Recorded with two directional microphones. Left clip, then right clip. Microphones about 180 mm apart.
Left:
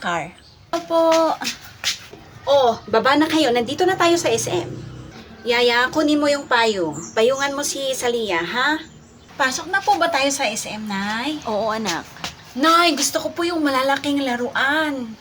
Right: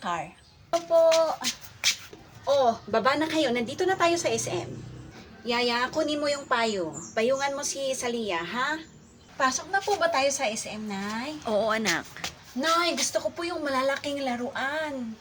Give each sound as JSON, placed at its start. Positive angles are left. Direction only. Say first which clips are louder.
{"t": 0.7, "sound": "a child's voice", "louder": "left 4 dB", "side_deg": 25}
{"t": 2.6, "sound": "a woman's voice", "louder": "left 7 dB", "side_deg": 20}
{"t": 11.4, "sound": "a woman's voice", "louder": "left 1 dB", "side_deg": -5}
{"t": 12.5, "sound": "a woman's voice", "louder": "left 9 dB", "side_deg": 25}